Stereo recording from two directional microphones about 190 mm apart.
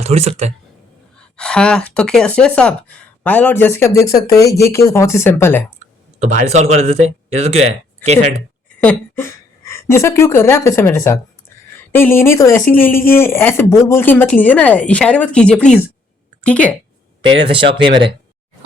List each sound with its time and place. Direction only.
0.0 s speech: 35° right (ahead or behind)
1.4 s a woman's voice: 5° left (ahead or behind)
6.1 s speech: 35° right (ahead or behind)
8.8 s a woman's voice: 10° left (ahead or behind)
17.4 s speech: 25° right (ahead or behind)